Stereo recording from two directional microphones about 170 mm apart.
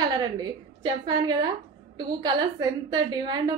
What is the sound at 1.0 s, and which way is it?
A woman's voice, 25° right (ahead or behind).